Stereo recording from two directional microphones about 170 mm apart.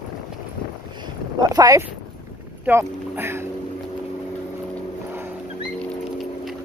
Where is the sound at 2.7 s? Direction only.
15° right (ahead or behind).